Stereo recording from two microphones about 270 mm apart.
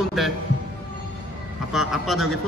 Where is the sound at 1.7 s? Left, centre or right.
Centre.